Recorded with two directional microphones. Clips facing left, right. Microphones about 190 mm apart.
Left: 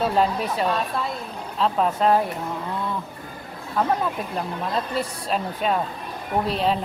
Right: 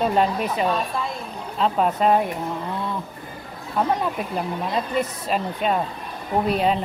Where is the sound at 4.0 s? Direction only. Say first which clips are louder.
Right 1 dB; 5° right (ahead or behind).